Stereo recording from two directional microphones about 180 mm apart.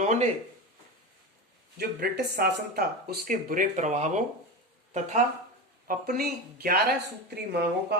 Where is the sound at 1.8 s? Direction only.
60° right (ahead or behind); by 4.2 s 40° right (ahead or behind).